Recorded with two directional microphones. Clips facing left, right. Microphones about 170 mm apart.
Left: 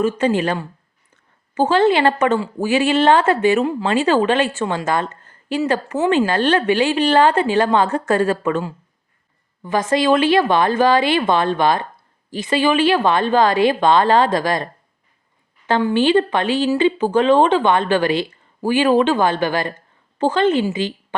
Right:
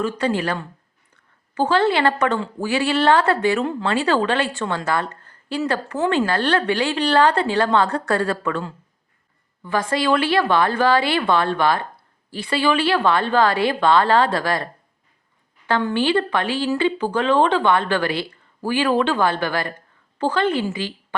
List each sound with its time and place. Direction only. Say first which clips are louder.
0.0 s speech: left 4 dB; 20° left (ahead or behind)
3.6 s a woman's voice: left 4 dB; 10° left (ahead or behind)
3.8 s a woman's voice: left 3 dB; 20° left (ahead or behind)